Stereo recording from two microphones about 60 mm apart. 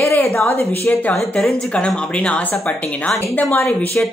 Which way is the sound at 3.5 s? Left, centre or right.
Left.